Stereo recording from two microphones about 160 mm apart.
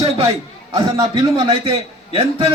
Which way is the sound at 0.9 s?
25° right (ahead or behind).